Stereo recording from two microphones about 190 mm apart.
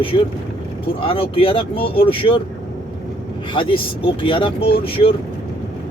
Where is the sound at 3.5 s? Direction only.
25° left (ahead or behind).